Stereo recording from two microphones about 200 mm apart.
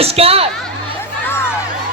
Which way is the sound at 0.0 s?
30° right (ahead or behind).